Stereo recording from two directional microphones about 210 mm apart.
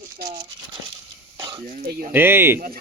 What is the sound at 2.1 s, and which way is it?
Speech, 10° right (ahead or behind).